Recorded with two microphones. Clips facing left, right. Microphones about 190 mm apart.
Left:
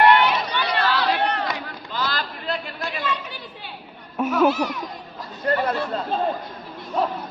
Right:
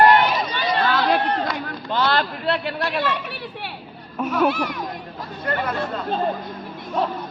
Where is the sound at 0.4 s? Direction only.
65° left (ahead or behind).